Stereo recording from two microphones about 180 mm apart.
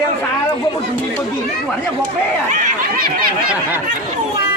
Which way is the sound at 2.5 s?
50° right (ahead or behind).